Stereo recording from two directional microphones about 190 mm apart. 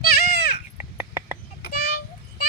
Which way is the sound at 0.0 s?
55° left (ahead or behind).